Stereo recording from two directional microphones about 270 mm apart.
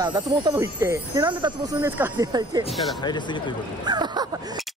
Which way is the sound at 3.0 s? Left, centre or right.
Centre.